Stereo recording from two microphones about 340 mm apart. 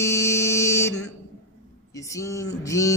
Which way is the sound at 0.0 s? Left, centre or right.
Centre.